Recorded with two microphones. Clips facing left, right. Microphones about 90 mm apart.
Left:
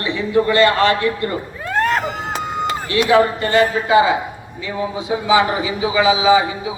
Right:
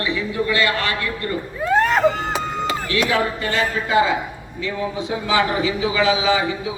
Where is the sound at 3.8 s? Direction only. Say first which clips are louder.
Left 4 dB; 15° left (ahead or behind).